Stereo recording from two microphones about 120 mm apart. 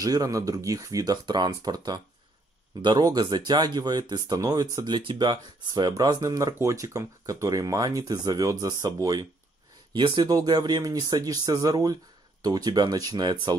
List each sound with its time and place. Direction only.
0.0 s speech: 30° right (ahead or behind)